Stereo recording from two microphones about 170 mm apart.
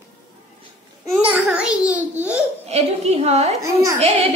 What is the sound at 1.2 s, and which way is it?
A child's voice, 5° right (ahead or behind).